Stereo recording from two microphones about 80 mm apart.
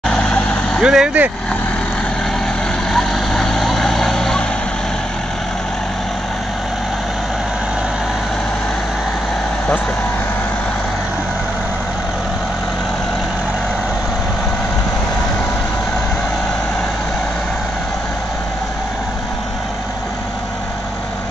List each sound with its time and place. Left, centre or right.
0.1 s vehicle: centre
0.8 s speech: centre
2.9 s vehicle: centre